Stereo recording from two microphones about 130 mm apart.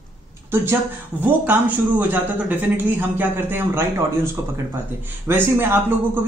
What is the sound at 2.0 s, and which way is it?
A man's voice, 15° right (ahead or behind).